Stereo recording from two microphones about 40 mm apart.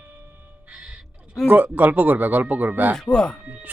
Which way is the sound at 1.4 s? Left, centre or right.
Right.